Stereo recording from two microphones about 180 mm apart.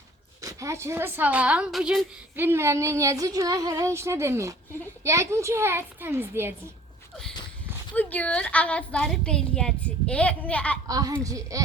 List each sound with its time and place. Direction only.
0.4 s a woman's voice: 15° right (ahead or behind)
7.9 s a woman's voice: 10° left (ahead or behind)
10.8 s a child's voice: 20° right (ahead or behind)